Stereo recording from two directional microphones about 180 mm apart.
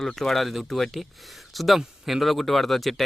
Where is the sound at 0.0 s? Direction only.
Centre (ahead or behind).